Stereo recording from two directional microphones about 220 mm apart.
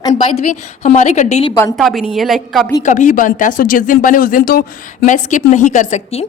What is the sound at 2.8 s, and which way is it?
A woman's voice, 35° left (ahead or behind).